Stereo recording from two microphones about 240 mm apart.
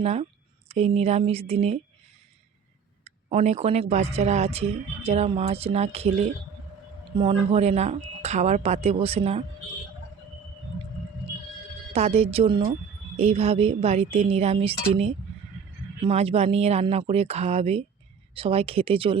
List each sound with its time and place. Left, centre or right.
0.0 s speech: right
3.0 s speech: right
11.9 s speech: right